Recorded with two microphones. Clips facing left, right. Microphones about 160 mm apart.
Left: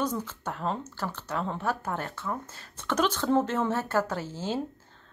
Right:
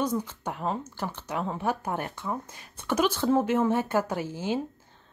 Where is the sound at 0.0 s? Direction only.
10° right (ahead or behind).